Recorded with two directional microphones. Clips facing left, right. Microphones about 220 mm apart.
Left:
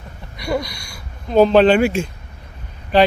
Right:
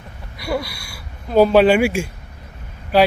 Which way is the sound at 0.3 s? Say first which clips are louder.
Left 1 dB; 5° right (ahead or behind).